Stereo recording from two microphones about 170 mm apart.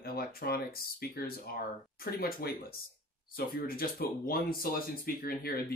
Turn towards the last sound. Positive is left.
turn(degrees=60)  # may be behind; listen again after turning